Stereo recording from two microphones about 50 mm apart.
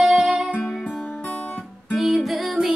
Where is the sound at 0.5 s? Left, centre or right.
Left.